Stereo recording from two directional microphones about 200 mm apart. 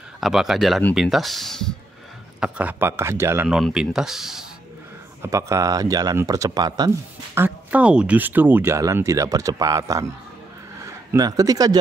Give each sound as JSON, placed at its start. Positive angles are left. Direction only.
{"t": 0.2, "sound": "speech", "side_deg": 0}
{"t": 5.2, "sound": "speech", "side_deg": -15}
{"t": 7.3, "sound": "speech", "side_deg": -10}